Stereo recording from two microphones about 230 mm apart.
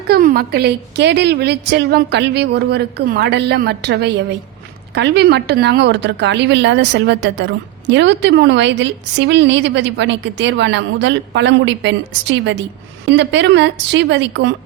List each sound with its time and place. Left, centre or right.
0.1 s a woman's voice: right